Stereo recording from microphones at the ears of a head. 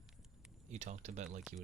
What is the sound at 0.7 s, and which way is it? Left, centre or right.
Speech, right.